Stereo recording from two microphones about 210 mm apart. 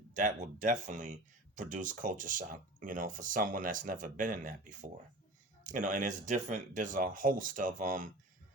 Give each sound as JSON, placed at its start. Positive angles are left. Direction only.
{"t": 0.1, "sound": "speech", "side_deg": -35}